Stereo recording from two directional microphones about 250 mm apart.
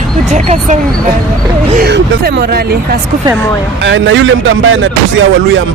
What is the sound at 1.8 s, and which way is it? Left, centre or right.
Speech, right.